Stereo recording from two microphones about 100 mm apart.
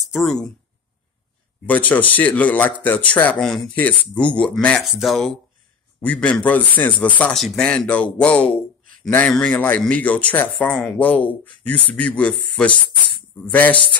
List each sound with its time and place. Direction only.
0.0 s speech: centre (ahead or behind)
1.7 s speech: 15° left (ahead or behind)
3.4 s speech: 5° left (ahead or behind)
3.7 s speech: 15° left (ahead or behind)
4.8 s speech: centre (ahead or behind)
5.9 s speech: 15° left (ahead or behind)
7.3 s speech: 5° left (ahead or behind)